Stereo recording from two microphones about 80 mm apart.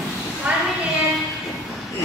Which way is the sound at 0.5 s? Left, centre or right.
Centre.